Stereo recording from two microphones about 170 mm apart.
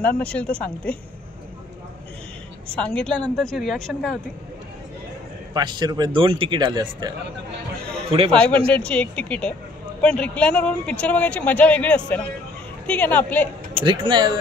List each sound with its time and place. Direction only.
0.2 s speech: 5° left (ahead or behind)
2.8 s a woman's voice: 5° left (ahead or behind)
5.5 s speech: 25° right (ahead or behind)
8.3 s speech: 5° left (ahead or behind)
13.8 s speech: 25° right (ahead or behind)